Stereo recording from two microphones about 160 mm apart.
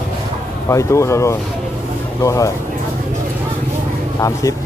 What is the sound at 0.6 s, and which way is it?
Speech, 20° left (ahead or behind).